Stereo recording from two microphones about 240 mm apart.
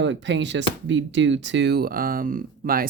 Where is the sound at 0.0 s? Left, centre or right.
Right.